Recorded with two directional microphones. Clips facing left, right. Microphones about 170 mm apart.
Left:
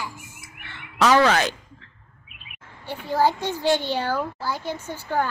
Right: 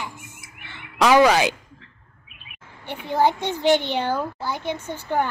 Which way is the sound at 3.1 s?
20° right (ahead or behind).